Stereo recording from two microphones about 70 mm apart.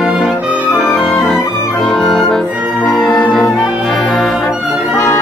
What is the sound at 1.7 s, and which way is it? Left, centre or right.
Music, centre.